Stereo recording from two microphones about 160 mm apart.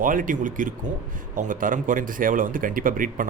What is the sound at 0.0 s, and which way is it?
Speech, 60° right (ahead or behind).